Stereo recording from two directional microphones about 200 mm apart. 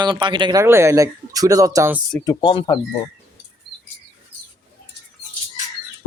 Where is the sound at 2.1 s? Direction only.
20° left (ahead or behind).